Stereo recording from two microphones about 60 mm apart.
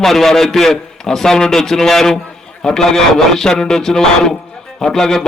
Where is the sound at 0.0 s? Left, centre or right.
Centre.